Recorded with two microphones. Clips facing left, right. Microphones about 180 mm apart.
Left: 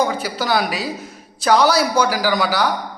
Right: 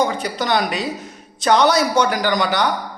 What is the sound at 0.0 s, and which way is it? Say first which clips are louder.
A man's voice: even; 5° left (ahead or behind).